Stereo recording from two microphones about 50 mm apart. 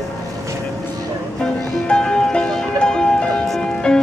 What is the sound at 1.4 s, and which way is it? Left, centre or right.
Music, centre.